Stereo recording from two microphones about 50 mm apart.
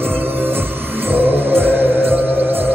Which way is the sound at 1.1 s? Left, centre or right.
Right.